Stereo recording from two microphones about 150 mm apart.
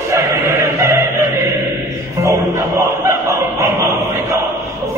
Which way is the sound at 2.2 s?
20° right (ahead or behind).